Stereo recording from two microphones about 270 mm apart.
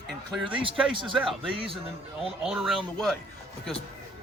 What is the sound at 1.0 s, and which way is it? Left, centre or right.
Speech, centre.